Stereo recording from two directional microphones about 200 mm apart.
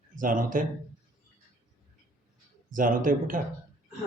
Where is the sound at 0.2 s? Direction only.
40° right (ahead or behind).